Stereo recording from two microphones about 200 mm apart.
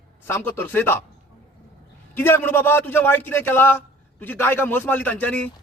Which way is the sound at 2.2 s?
10° left (ahead or behind).